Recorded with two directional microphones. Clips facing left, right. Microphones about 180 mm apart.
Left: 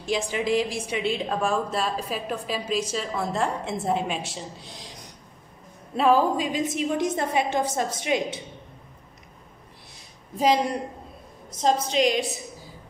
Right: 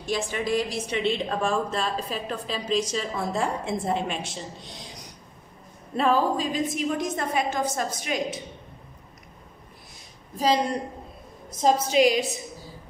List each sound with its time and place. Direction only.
0.1 s a woman's voice: 10° left (ahead or behind)
5.9 s a sound: 5° left (ahead or behind)
6.3 s a woman's voice: 20° left (ahead or behind)
11.6 s a woman's voice: 5° right (ahead or behind)